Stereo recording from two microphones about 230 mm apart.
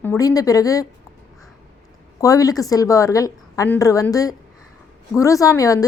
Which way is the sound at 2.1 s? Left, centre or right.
Centre.